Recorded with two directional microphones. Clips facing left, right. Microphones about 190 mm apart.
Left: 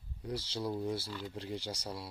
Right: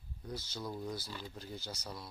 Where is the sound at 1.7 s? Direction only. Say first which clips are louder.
Left 4 dB; 10° left (ahead or behind).